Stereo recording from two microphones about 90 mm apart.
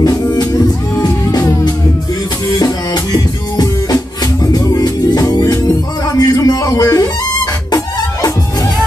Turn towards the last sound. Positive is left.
turn(degrees=45)  # may be behind; listen again after turning